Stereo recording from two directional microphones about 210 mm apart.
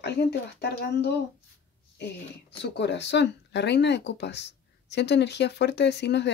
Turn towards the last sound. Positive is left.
turn(degrees=55)  # may be behind; listen again after turning